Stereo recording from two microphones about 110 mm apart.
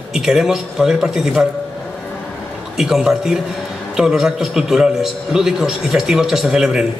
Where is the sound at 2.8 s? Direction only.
5° right (ahead or behind).